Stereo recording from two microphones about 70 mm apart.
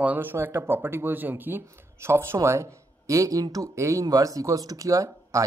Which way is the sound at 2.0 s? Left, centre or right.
Right.